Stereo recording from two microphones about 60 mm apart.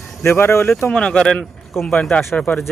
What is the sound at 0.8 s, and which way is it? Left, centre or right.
Speech, centre.